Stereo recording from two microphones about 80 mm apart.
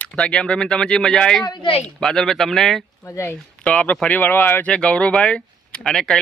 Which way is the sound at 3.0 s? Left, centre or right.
Left.